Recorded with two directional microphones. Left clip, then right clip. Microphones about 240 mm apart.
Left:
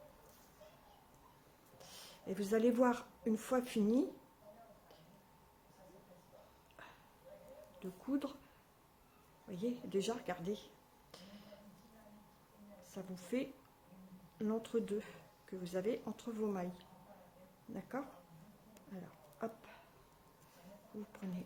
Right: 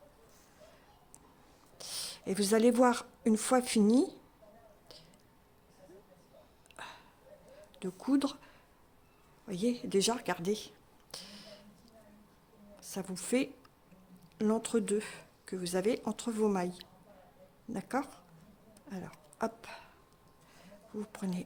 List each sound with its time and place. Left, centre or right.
1.8 s a woman's voice: right
6.8 s a sound: right
7.8 s speech: right
9.5 s speech: right
11.1 s a sound: right
12.9 s a woman's voice: right